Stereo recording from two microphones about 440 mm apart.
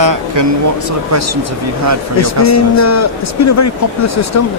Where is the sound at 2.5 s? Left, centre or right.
Left.